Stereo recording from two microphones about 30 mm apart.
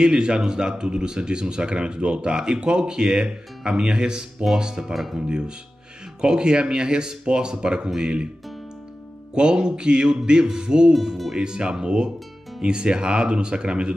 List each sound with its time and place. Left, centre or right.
0.0 s speech: right
4.9 s speech: centre
6.2 s speech: right
9.3 s speech: right
10.9 s speech: centre
11.3 s speech: right